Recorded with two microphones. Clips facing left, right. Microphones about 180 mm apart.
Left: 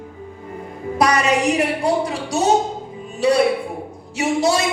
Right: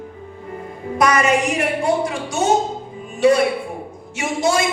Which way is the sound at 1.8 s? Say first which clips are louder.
Even; 35° left (ahead or behind).